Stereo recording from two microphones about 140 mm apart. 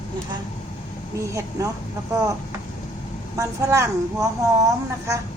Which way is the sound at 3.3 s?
20° right (ahead or behind).